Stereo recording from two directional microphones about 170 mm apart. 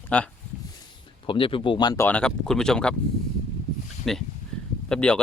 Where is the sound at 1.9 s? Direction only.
10° left (ahead or behind).